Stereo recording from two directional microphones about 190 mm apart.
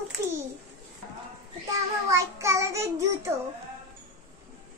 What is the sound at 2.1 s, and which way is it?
A child's voice, 15° right (ahead or behind).